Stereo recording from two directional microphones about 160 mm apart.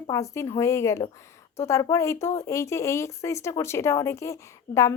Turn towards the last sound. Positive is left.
turn(degrees=20)  # may be behind; listen again after turning